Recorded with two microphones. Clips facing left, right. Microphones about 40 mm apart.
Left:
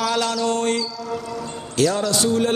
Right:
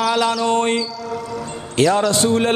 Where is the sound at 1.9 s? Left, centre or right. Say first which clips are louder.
Right 4 dB; right.